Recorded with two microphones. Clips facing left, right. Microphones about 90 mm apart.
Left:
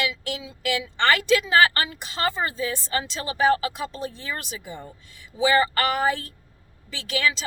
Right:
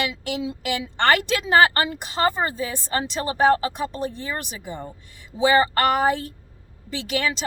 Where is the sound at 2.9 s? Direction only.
45° right (ahead or behind).